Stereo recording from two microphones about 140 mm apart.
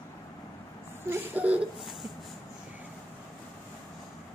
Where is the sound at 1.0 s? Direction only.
15° right (ahead or behind).